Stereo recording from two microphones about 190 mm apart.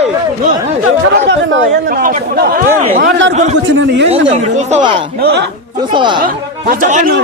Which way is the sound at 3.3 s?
35° right (ahead or behind).